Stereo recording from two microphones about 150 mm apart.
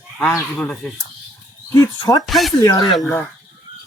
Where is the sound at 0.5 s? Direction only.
10° left (ahead or behind).